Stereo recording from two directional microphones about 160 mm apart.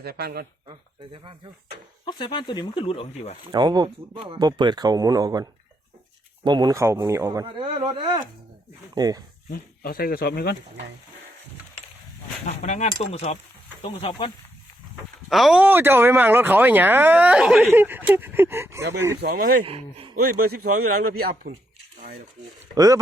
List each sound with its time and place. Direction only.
0.0 s speech: 75° right (ahead or behind)
0.7 s speech: 30° right (ahead or behind)
2.0 s speech: 30° left (ahead or behind)
3.5 s speech: 25° right (ahead or behind)
7.6 s speech: 35° right (ahead or behind)
9.0 s speech: 25° right (ahead or behind)
9.5 s speech: 70° left (ahead or behind)
12.5 s speech: 45° left (ahead or behind)
15.3 s speech: centre (ahead or behind); by 19.2 s 15° right (ahead or behind)
19.2 s speech: 65° right (ahead or behind)
19.6 s speech: 35° right (ahead or behind)
21.1 s speech: 75° right (ahead or behind)
22.7 s speech: 20° right (ahead or behind)